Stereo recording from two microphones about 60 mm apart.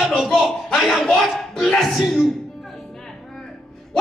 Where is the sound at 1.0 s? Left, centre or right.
Centre.